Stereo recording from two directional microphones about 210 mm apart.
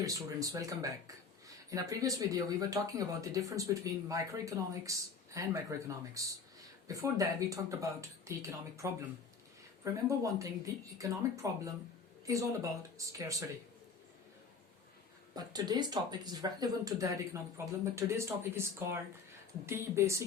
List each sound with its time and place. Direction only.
0.0 s speech: 15° right (ahead or behind)
15.4 s speech: 20° right (ahead or behind)